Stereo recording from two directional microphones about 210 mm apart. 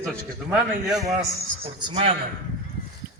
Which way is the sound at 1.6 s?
25° right (ahead or behind).